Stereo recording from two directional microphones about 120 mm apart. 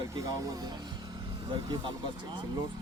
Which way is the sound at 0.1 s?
30° right (ahead or behind).